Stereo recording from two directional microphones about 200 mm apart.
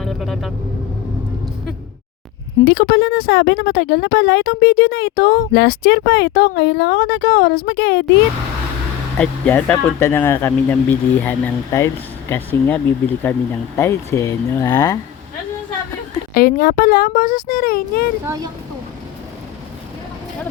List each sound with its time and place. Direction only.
0.0 s vehicle: centre (ahead or behind)
2.7 s speech: 50° left (ahead or behind)
9.1 s speech: 5° left (ahead or behind)
16.3 s speech: 45° left (ahead or behind)
18.3 s speech: 20° right (ahead or behind)